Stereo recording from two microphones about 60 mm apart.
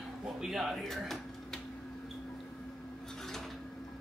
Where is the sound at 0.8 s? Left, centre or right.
Centre.